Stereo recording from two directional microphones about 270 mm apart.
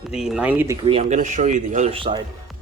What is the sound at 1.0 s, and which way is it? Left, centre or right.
Speech, right.